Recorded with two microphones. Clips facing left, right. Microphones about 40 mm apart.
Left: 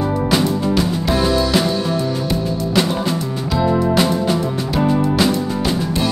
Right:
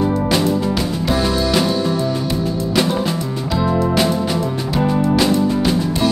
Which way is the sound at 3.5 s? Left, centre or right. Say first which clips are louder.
Left 1 dB; centre.